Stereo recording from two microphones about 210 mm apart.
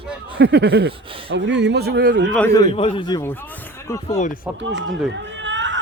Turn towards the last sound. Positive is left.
turn(degrees=-60)  # may be behind; listen again after turning